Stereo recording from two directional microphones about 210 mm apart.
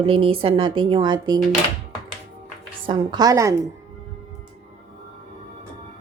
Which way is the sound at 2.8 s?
20° right (ahead or behind).